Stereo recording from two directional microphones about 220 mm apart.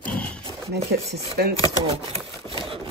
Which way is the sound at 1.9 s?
25° right (ahead or behind).